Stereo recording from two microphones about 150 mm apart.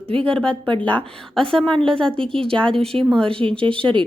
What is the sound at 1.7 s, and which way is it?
Speech, 35° right (ahead or behind).